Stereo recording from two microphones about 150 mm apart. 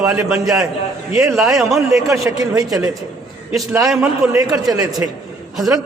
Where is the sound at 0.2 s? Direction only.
20° right (ahead or behind).